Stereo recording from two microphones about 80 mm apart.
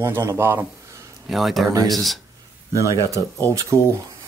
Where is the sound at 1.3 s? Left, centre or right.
Centre.